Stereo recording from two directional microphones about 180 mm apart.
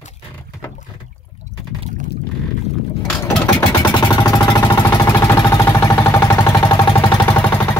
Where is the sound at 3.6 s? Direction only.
25° left (ahead or behind).